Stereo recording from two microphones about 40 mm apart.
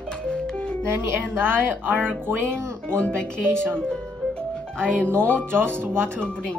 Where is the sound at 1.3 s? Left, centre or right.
Right.